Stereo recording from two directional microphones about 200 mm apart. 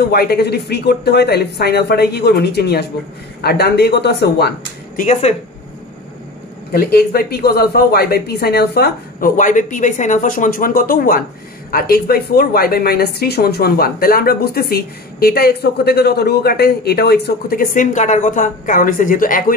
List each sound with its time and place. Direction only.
0.0 s speech: 50° left (ahead or behind)
5.0 s speech: 35° left (ahead or behind)
6.7 s a woman's voice: 50° left (ahead or behind)